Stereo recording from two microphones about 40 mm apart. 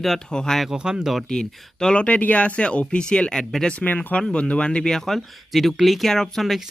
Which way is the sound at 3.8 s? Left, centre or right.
Left.